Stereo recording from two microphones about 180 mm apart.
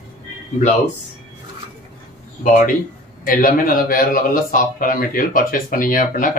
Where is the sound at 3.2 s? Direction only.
50° left (ahead or behind).